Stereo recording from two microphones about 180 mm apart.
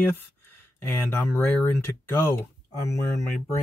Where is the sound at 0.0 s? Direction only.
10° left (ahead or behind).